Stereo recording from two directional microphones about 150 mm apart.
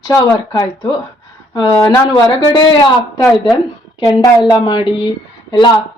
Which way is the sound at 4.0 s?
25° left (ahead or behind).